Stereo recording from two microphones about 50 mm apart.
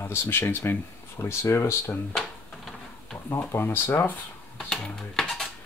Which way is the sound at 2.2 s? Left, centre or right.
Centre.